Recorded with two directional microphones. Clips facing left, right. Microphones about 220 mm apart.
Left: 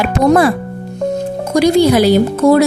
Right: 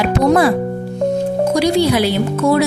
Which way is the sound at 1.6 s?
45° left (ahead or behind).